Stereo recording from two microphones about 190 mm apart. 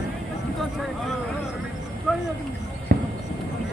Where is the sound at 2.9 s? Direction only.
55° right (ahead or behind).